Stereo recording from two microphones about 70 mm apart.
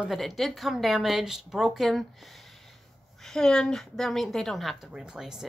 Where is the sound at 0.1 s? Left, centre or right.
Centre.